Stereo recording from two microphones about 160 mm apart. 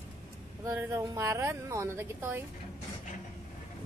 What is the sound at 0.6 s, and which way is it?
Speech, 20° right (ahead or behind).